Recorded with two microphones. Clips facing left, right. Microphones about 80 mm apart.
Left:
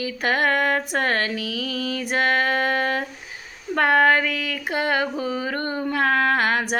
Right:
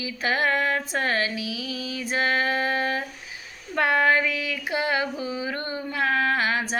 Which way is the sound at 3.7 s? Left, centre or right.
Left.